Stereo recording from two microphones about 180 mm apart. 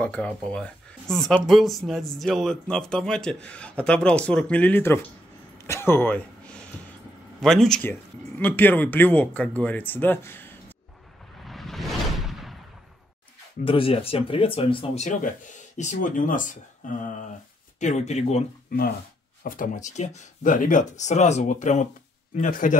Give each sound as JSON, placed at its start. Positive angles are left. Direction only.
{"t": 0.0, "sound": "speech", "side_deg": 5}
{"t": 5.7, "sound": "a sound", "side_deg": 15}
{"t": 7.3, "sound": "speech", "side_deg": 0}
{"t": 11.4, "sound": "a sound", "side_deg": 0}
{"t": 13.7, "sound": "speech", "side_deg": 30}
{"t": 15.0, "sound": "speech", "side_deg": 45}
{"t": 19.4, "sound": "speech", "side_deg": 50}